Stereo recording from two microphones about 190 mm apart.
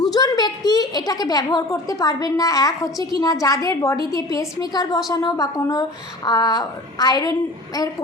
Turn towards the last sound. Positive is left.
turn(degrees=20)  # may be behind; listen again after turning